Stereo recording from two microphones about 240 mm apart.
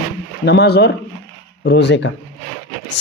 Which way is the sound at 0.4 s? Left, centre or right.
Left.